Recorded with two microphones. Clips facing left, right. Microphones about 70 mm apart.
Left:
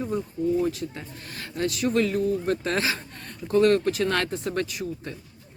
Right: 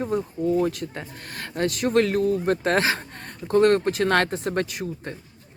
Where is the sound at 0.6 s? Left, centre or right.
Right.